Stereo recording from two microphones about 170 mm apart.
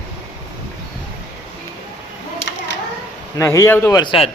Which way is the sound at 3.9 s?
25° left (ahead or behind).